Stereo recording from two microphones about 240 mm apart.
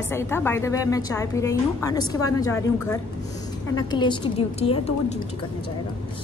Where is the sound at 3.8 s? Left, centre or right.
Centre.